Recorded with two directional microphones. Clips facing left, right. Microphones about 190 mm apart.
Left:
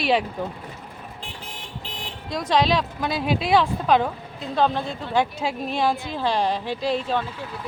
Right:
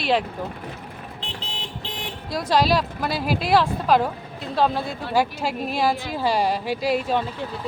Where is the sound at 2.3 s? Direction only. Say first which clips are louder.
Right 1 dB; 5° right (ahead or behind).